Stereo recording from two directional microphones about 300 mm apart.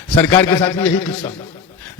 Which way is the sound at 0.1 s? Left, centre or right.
Centre.